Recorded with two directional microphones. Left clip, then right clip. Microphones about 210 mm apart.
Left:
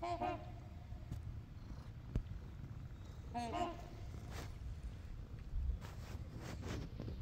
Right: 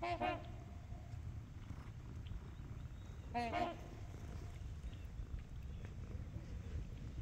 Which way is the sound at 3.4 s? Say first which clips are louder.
Right 1 dB; 30° right (ahead or behind).